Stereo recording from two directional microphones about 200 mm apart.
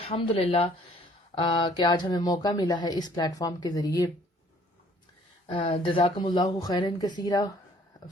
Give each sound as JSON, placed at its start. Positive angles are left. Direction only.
{"t": 0.0, "sound": "speech", "side_deg": 30}
{"t": 5.5, "sound": "speech", "side_deg": 25}